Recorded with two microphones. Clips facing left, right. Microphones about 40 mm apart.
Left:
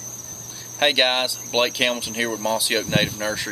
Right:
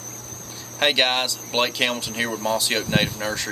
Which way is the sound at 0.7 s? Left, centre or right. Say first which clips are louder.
Left 1 dB; centre.